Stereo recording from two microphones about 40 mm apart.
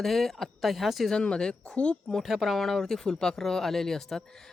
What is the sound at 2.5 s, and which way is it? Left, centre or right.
Speech, centre.